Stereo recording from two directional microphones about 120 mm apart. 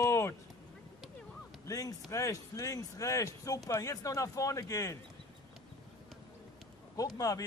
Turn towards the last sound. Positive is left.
turn(degrees=30)  # may be behind; listen again after turning